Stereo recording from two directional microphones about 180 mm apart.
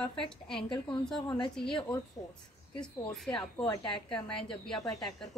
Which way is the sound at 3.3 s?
25° left (ahead or behind).